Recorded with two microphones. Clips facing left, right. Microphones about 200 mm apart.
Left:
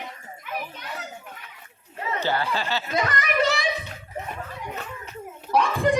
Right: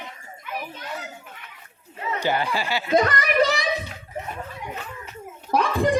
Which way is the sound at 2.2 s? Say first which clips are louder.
Right 2 dB; 15° right (ahead or behind).